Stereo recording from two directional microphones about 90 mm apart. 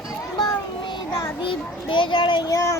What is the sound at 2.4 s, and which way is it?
Speech, 40° left (ahead or behind).